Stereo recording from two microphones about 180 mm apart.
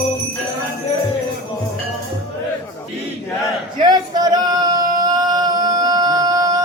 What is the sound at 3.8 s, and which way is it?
Male singing, 25° right (ahead or behind).